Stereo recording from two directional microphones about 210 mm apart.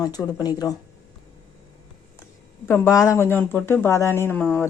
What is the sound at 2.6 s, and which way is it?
Speech, 10° left (ahead or behind).